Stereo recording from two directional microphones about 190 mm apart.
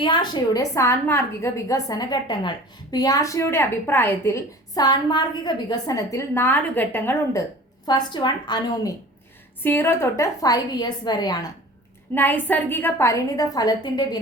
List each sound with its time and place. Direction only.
0.0 s a woman's voice: 25° left (ahead or behind)
7.9 s a woman's voice: 20° left (ahead or behind)
12.1 s a woman's voice: 10° left (ahead or behind)